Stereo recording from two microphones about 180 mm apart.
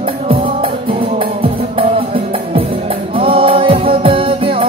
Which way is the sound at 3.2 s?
30° right (ahead or behind).